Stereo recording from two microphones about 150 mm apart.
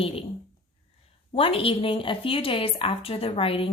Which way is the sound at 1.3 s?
35° left (ahead or behind).